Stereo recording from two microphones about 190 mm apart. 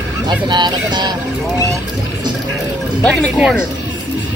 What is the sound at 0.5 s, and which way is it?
Speech, 25° right (ahead or behind).